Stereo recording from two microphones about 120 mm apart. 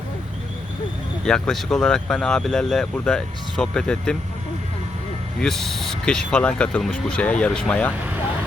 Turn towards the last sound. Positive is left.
turn(degrees=10)  # may be behind; listen again after turning